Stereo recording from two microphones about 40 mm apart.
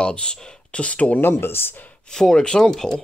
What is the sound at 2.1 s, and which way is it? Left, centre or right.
Speech, centre.